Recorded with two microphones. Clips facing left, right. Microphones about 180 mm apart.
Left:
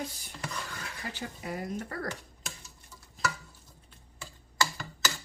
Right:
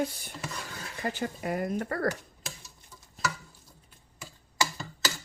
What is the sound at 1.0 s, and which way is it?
Speech, 50° right (ahead or behind).